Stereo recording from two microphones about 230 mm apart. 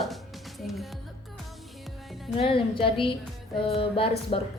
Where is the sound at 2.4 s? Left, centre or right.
Left.